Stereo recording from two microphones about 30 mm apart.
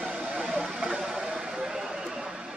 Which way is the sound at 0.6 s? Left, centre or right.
Centre.